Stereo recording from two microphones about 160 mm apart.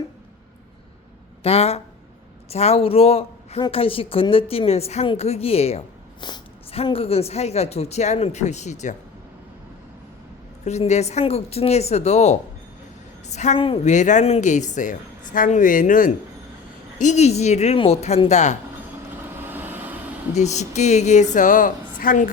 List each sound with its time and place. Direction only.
1.5 s speech: 40° left (ahead or behind)
6.1 s speech: 30° left (ahead or behind); by 9.0 s 45° left (ahead or behind)
10.6 s a woman's voice: 45° left (ahead or behind)
13.6 s speech: 35° left (ahead or behind)
13.9 s speech: 50° left (ahead or behind)
19.4 s vehicle: 10° right (ahead or behind)
20.3 s speech: 45° left (ahead or behind)